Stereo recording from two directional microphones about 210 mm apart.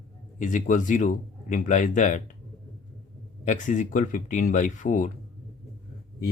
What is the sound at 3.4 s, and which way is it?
Speech, 35° left (ahead or behind).